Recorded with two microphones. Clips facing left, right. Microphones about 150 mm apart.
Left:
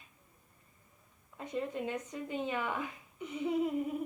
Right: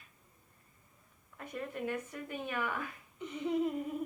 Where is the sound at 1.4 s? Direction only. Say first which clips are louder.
Left 3 dB; 20° left (ahead or behind).